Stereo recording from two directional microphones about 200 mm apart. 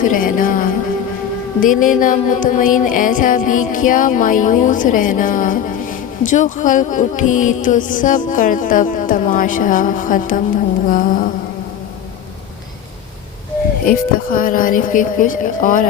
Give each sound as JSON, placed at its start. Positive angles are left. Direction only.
{"t": 0.0, "sound": "music", "side_deg": 45}
{"t": 10.8, "sound": "speech", "side_deg": 40}
{"t": 13.8, "sound": "speech", "side_deg": 45}